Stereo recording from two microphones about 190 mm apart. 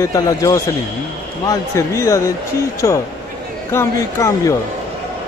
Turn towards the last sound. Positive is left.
turn(degrees=15)  # may be behind; listen again after turning